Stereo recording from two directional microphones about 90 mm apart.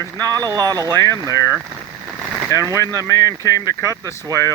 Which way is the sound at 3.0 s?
40° left (ahead or behind).